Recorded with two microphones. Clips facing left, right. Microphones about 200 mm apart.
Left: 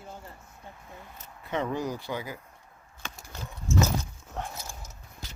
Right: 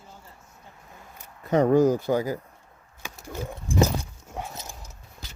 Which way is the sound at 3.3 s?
50° right (ahead or behind).